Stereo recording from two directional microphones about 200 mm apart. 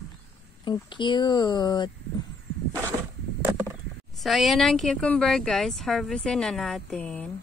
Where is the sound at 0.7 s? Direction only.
25° left (ahead or behind).